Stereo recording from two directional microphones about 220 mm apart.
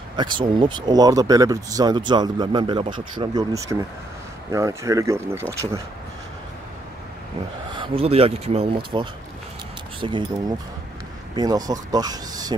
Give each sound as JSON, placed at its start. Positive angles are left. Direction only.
{"t": 0.1, "sound": "speech", "side_deg": -20}
{"t": 7.7, "sound": "speech", "side_deg": -25}
{"t": 11.3, "sound": "speech", "side_deg": -15}